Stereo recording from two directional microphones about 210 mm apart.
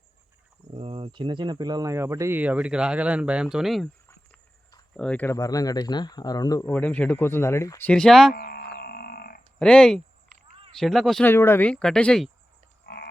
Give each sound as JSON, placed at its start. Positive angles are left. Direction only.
{"t": 0.7, "sound": "speech", "side_deg": -25}
{"t": 4.9, "sound": "speech", "side_deg": 5}
{"t": 8.3, "sound": "a sound", "side_deg": 45}
{"t": 9.6, "sound": "speech", "side_deg": 5}
{"t": 12.8, "sound": "frog", "side_deg": 50}